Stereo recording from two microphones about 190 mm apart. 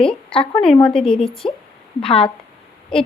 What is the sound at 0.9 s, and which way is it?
Speech, 5° left (ahead or behind).